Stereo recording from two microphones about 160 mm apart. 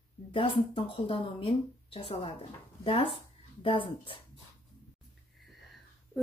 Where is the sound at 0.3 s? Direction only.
35° left (ahead or behind).